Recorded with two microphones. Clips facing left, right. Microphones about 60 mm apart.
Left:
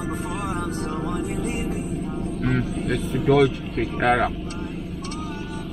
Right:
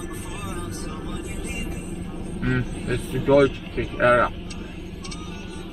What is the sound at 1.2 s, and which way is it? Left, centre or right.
Music, left.